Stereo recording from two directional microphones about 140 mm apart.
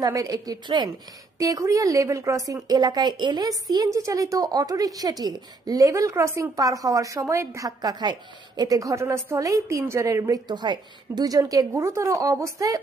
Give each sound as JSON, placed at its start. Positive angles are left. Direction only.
{"t": 0.0, "sound": "a woman's voice", "side_deg": -25}